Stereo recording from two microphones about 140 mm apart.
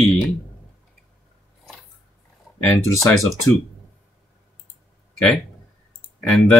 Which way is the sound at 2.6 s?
15° left (ahead or behind).